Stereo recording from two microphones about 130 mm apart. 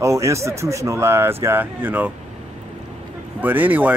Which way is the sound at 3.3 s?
15° right (ahead or behind).